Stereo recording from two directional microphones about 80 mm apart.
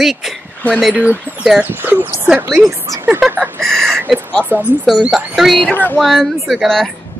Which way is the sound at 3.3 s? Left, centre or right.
Right.